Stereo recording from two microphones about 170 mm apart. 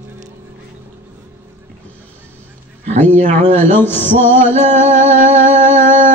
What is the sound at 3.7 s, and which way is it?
Music, 10° left (ahead or behind).